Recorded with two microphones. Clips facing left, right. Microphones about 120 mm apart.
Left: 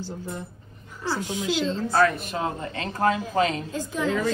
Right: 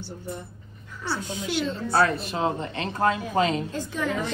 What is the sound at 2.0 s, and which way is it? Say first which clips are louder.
A woman's voice: even; 30° right (ahead or behind).